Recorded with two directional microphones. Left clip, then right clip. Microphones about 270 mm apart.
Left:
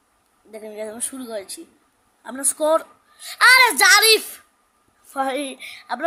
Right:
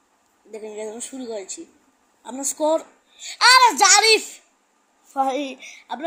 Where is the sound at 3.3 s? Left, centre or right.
Left.